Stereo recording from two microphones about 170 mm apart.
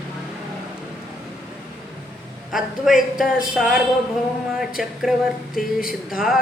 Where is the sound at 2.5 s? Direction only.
Centre (ahead or behind).